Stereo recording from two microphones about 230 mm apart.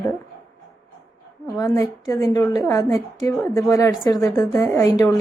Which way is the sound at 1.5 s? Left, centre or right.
Centre.